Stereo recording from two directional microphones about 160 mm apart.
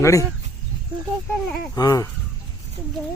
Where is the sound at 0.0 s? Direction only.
20° left (ahead or behind).